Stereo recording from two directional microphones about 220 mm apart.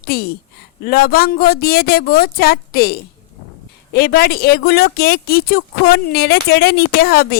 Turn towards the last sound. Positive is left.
turn(degrees=45)  # may be behind; listen again after turning